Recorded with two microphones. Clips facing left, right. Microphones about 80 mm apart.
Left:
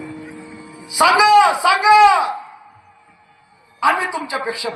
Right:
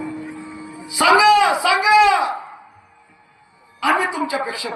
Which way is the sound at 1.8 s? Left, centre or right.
Left.